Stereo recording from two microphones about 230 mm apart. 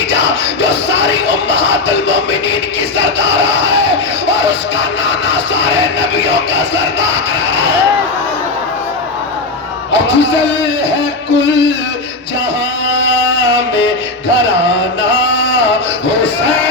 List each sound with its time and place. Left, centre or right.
0.1 s music: left
3.0 s a sound: left
5.3 s music: left
9.9 s speech: left
12.9 s music: left
15.3 s a sound: left